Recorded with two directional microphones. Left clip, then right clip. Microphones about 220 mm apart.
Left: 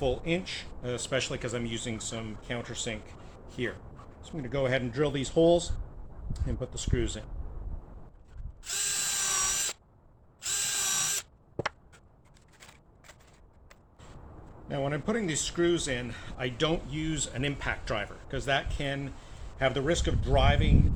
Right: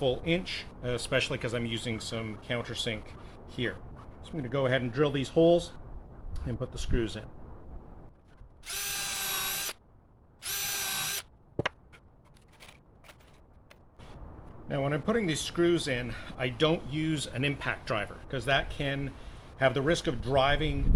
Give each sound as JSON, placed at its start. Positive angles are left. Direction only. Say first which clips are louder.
{"t": 0.0, "sound": "speech", "louder": "right 1 dB", "side_deg": -5}
{"t": 4.2, "sound": "speech", "louder": "even", "side_deg": -10}
{"t": 8.6, "sound": "drill", "louder": "left 2 dB", "side_deg": -10}
{"t": 14.7, "sound": "speech", "louder": "right 1 dB", "side_deg": -10}